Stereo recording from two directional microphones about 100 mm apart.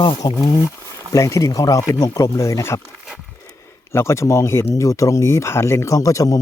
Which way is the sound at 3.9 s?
30° left (ahead or behind).